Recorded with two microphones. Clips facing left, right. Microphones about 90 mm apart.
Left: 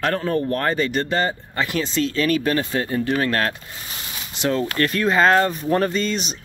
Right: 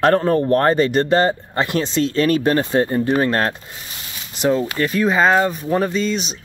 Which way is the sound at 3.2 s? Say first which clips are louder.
Right 3 dB; 25° right (ahead or behind).